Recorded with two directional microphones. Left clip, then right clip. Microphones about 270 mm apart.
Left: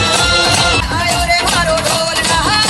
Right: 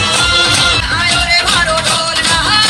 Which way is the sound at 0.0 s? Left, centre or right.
Left.